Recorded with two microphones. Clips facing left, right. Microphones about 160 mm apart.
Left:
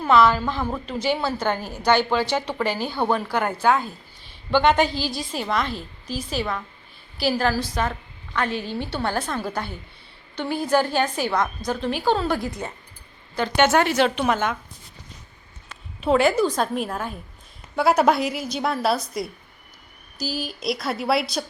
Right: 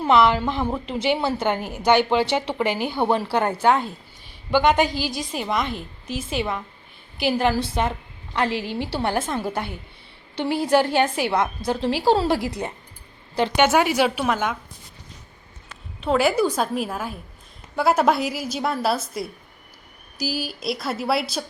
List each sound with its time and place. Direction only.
0.0 s a woman's voice: 20° right (ahead or behind)
4.5 s a woman's voice: 10° right (ahead or behind); by 8.4 s 25° right (ahead or behind)
8.4 s a woman's voice: 80° right
8.7 s a woman's voice: 25° right (ahead or behind)
13.7 s a woman's voice: 10° right (ahead or behind)
16.0 s a woman's voice: centre (ahead or behind)